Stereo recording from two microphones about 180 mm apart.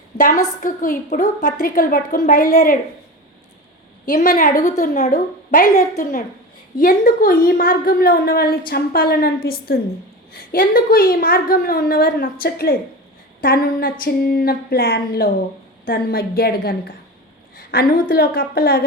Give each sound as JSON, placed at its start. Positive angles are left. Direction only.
{"t": 0.2, "sound": "a woman's voice", "side_deg": 50}
{"t": 1.6, "sound": "a woman's voice", "side_deg": 50}
{"t": 4.0, "sound": "a woman's voice", "side_deg": 50}
{"t": 17.6, "sound": "a sound", "side_deg": 55}
{"t": 18.1, "sound": "a woman's voice", "side_deg": 55}